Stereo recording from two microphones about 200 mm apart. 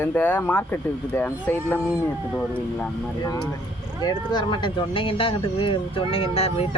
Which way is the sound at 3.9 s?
20° left (ahead or behind).